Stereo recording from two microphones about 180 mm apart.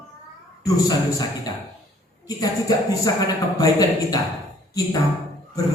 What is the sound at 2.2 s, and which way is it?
A man's voice, 20° left (ahead or behind).